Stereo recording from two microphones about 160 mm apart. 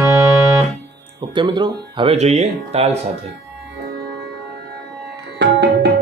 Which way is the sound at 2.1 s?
45° right (ahead or behind).